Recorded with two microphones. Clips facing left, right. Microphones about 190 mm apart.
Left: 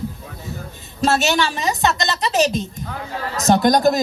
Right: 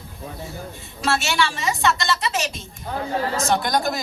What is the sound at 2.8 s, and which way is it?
Speech, 30° right (ahead or behind).